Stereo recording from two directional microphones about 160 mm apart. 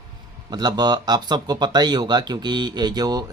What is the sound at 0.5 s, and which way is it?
Speech, 25° right (ahead or behind).